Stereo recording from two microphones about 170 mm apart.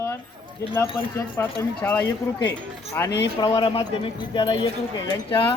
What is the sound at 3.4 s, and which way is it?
Speech, 30° left (ahead or behind).